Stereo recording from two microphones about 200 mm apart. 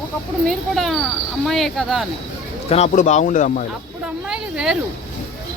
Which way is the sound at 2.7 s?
35° left (ahead or behind).